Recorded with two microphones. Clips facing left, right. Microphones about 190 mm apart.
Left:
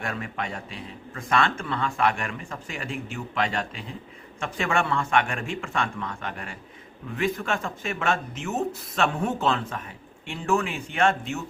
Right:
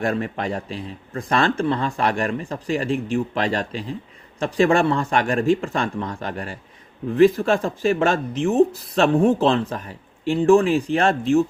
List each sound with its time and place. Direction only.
0.0 s speech: 35° right (ahead or behind)